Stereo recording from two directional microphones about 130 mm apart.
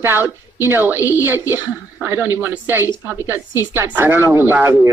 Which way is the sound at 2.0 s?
15° right (ahead or behind).